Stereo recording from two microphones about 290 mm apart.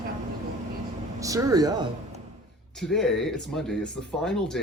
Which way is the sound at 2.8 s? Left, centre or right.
Centre.